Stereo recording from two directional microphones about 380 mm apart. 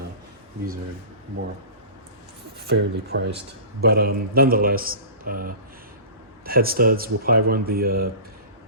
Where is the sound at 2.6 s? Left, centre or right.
Right.